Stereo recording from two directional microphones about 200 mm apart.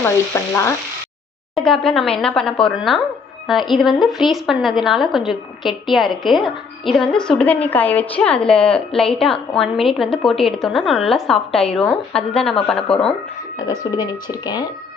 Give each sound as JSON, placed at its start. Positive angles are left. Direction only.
{"t": 0.5, "sound": "frying", "side_deg": 15}
{"t": 1.5, "sound": "a woman's voice", "side_deg": 5}
{"t": 13.6, "sound": "speech", "side_deg": 20}